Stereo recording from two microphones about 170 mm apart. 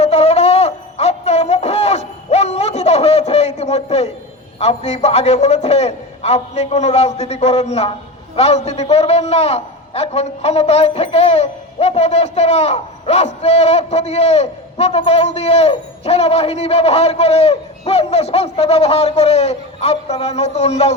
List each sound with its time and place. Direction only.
0.0 s music: 40° left (ahead or behind)
4.6 s a man's voice: 40° left (ahead or behind)